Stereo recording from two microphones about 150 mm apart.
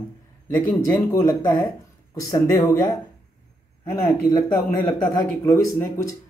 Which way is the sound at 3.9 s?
25° left (ahead or behind).